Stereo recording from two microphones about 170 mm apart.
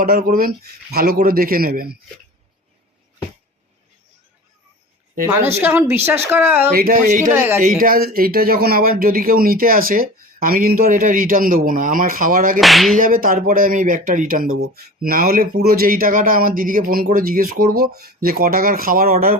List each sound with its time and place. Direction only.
0.0 s speech: 60° right (ahead or behind)
5.5 s speech: 15° right (ahead or behind)
6.7 s speech: 60° right (ahead or behind)
12.5 s music: centre (ahead or behind)
13.0 s speech: 55° right (ahead or behind)